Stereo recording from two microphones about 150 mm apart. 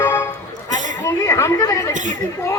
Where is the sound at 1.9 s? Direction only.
55° right (ahead or behind).